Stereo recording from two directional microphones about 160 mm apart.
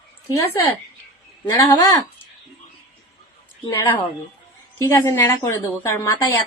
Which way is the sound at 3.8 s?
15° left (ahead or behind).